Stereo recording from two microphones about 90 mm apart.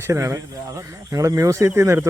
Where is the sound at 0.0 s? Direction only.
30° right (ahead or behind).